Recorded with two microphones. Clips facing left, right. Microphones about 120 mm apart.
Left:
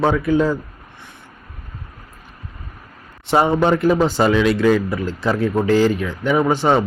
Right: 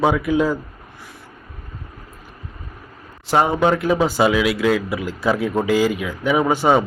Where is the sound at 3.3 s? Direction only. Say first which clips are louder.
Left 1 dB; centre (ahead or behind).